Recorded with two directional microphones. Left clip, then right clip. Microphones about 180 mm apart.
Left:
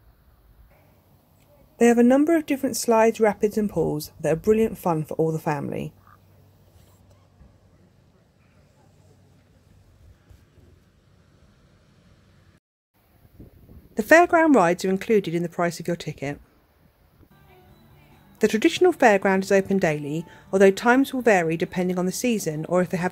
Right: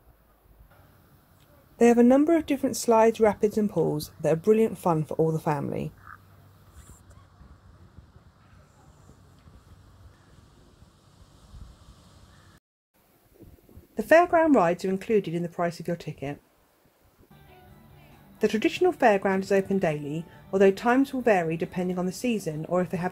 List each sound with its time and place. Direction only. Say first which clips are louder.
1.8 s speech: left 2 dB; 10° left (ahead or behind)
13.9 s a woman's voice: left 3 dB; 20° left (ahead or behind)
18.4 s a woman's voice: left 5 dB; 25° left (ahead or behind)